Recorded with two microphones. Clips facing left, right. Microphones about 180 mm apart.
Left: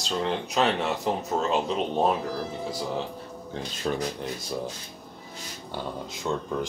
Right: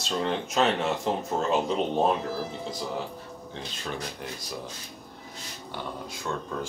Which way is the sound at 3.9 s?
35° left (ahead or behind).